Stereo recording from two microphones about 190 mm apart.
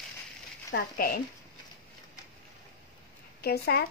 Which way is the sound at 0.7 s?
55° left (ahead or behind).